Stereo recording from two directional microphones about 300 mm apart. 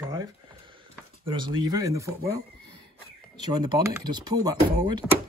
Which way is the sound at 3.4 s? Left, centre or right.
Centre.